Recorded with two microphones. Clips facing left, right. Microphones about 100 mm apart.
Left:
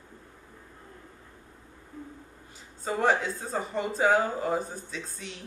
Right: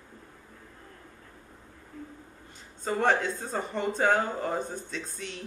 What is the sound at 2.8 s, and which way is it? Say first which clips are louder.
Speech: even; 5° left (ahead or behind).